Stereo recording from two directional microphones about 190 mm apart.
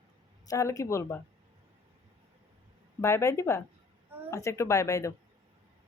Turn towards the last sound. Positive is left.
turn(degrees=15)  # may be behind; listen again after turning